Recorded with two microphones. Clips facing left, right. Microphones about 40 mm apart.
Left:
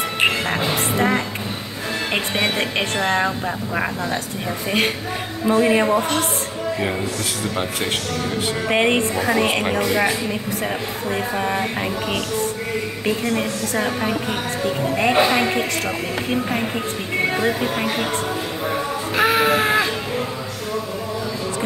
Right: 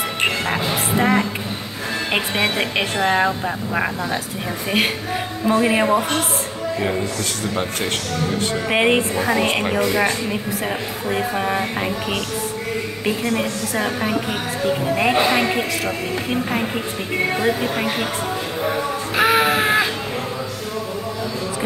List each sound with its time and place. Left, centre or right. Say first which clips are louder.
0.5 s music: even; centre
2.1 s a woman's voice: right 1 dB; centre
8.6 s a woman's voice: right 1 dB; centre
19.1 s music: right 1 dB; centre